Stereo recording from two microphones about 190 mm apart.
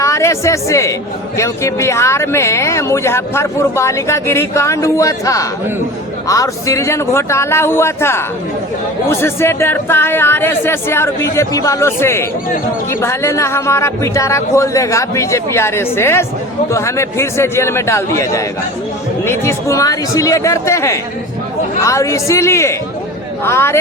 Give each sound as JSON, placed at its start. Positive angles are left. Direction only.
{"t": 0.0, "sound": "speech", "side_deg": 15}